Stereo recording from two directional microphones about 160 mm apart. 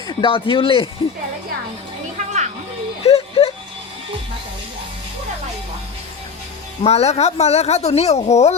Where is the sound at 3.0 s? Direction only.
40° left (ahead or behind).